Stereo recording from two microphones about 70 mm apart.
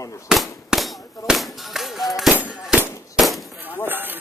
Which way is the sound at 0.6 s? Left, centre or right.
Centre.